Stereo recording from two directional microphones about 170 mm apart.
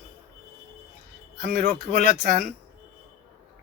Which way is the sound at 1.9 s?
55° right (ahead or behind).